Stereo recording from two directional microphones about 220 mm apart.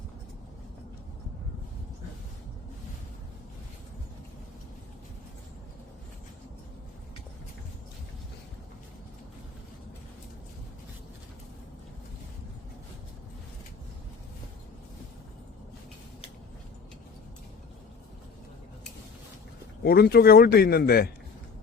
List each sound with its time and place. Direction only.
19.8 s speech: 45° left (ahead or behind)